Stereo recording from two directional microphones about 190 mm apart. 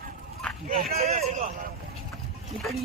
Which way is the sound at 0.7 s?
35° right (ahead or behind).